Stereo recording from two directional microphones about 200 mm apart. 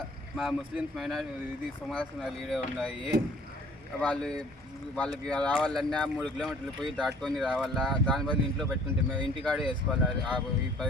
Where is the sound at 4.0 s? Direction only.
5° left (ahead or behind).